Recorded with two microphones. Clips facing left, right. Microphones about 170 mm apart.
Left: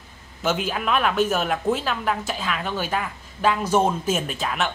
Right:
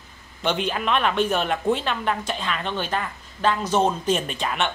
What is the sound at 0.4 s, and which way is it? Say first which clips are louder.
Speech: even; 5° left (ahead or behind).